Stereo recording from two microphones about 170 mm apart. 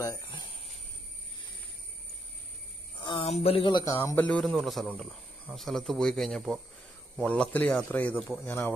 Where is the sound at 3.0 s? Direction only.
30° left (ahead or behind).